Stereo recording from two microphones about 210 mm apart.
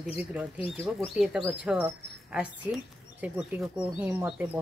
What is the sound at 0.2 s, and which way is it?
Speech, 5° right (ahead or behind).